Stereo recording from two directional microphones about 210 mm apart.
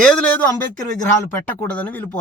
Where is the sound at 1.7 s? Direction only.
10° left (ahead or behind).